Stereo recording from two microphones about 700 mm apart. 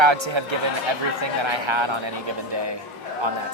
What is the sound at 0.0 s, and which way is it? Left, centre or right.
Speech, right.